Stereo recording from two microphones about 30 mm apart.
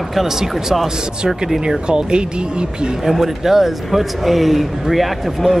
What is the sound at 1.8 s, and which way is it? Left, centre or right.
Speech, right.